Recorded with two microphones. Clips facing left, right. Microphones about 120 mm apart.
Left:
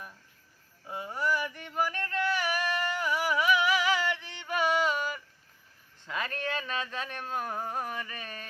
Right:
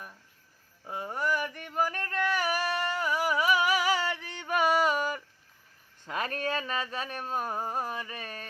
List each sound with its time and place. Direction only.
0.9 s yodeling: 45° right (ahead or behind)
6.1 s a sound: 40° right (ahead or behind)
8.2 s music: 40° right (ahead or behind)